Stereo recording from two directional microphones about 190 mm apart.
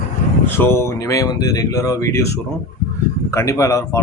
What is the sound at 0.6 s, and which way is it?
Speech, 15° left (ahead or behind).